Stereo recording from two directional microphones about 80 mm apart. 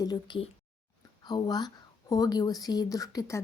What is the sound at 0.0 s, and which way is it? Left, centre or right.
A woman's voice, left.